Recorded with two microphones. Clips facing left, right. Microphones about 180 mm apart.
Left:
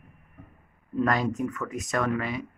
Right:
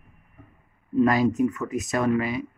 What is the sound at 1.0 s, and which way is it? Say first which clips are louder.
Speech: right 6 dB; 10° right (ahead or behind).